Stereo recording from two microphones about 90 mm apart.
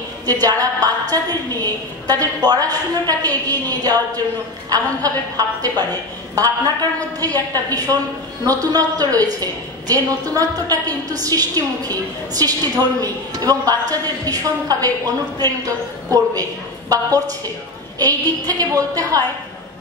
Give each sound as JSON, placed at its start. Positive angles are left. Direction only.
{"t": 0.3, "sound": "a woman's voice", "side_deg": -40}